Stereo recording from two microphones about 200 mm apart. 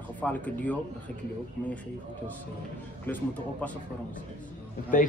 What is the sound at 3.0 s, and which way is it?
Speech, 10° left (ahead or behind).